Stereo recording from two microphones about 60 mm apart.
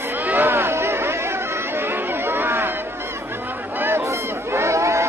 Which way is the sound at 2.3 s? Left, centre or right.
Right.